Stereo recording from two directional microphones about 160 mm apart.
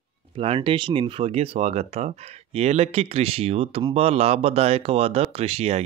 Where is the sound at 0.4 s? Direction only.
35° right (ahead or behind).